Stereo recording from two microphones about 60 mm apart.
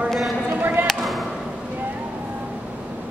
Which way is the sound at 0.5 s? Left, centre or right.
Right.